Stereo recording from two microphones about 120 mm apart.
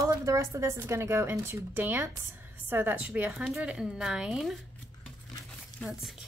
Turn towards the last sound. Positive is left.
turn(degrees=-5)  # may be behind; listen again after turning